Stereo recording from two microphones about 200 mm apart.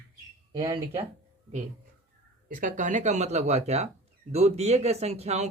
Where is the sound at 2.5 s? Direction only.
40° right (ahead or behind).